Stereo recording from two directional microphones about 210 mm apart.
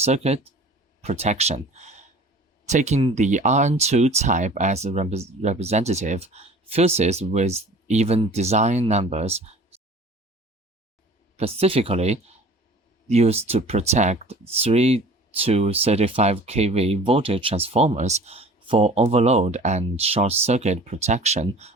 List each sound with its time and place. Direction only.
0.0 s speech: 30° right (ahead or behind)
11.3 s speech: 30° right (ahead or behind)